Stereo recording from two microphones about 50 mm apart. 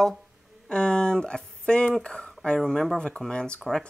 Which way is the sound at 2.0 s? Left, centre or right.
Centre.